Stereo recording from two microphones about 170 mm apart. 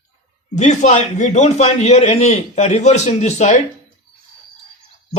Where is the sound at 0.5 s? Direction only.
45° left (ahead or behind).